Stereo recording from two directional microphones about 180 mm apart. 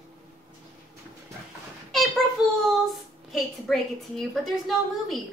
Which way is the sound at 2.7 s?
Centre (ahead or behind).